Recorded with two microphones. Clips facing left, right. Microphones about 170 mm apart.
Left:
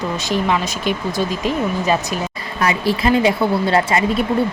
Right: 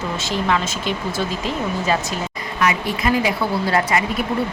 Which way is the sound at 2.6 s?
30° left (ahead or behind).